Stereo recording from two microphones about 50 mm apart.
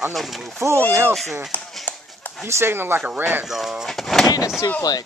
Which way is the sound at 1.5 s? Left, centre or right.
Left.